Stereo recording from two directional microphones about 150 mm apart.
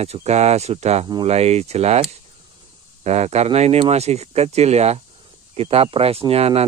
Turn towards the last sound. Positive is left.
turn(degrees=-45)  # may be behind; listen again after turning